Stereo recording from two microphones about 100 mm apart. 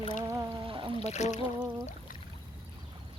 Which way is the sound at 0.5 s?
60° right (ahead or behind).